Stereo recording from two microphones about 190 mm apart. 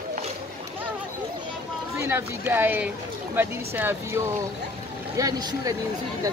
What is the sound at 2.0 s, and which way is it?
Speech, 15° right (ahead or behind).